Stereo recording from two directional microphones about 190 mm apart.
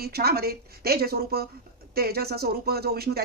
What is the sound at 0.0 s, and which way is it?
A woman's voice, 55° right (ahead or behind).